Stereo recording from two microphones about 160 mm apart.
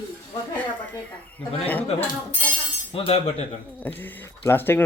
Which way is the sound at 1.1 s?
10° left (ahead or behind).